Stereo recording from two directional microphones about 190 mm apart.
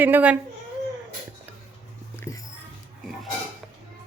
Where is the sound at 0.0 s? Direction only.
10° right (ahead or behind).